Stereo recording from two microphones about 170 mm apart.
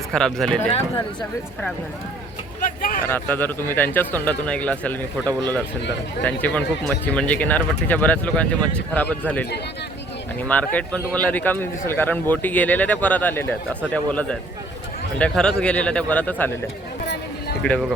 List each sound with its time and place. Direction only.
0.1 s speech: centre (ahead or behind)
2.6 s a sound: 55° left (ahead or behind)
3.1 s speech: 10° left (ahead or behind)
10.5 s speech: 10° left (ahead or behind)
17.6 s speech: 5° left (ahead or behind)